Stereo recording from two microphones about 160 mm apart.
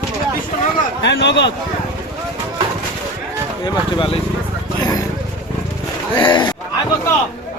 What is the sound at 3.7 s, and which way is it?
Speech, 30° left (ahead or behind).